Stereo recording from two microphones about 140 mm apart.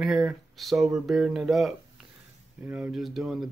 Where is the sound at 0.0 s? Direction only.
Centre (ahead or behind).